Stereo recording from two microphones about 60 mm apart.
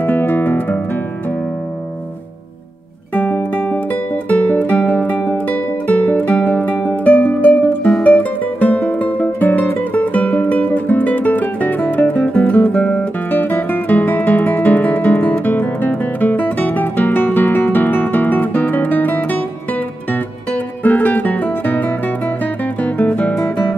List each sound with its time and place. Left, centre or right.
0.0 s guitar: left
3.2 s music: left
13.3 s music: left
13.7 s guitar: left
15.2 s music: left
20.8 s music: left